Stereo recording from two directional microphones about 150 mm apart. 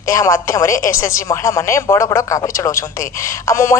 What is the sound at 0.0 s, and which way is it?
Speech, 20° left (ahead or behind).